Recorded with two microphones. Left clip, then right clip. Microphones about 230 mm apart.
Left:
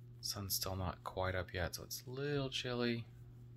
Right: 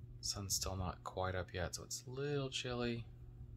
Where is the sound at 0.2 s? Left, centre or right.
Centre.